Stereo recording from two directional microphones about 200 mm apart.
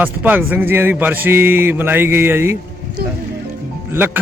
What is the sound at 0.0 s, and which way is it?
Speech, 10° right (ahead or behind).